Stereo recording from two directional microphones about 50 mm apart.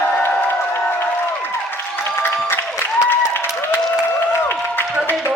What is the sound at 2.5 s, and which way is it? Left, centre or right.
Applause, left.